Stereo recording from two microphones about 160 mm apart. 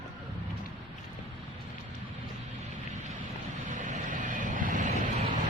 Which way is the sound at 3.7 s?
55° right (ahead or behind).